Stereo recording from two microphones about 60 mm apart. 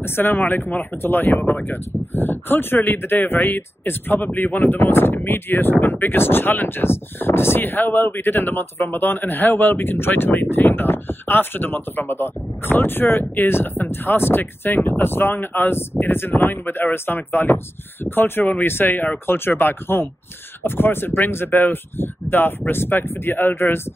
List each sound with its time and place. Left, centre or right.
0.0 s speech: left